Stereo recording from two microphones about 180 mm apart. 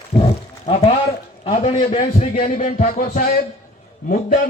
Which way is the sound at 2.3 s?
45° left (ahead or behind).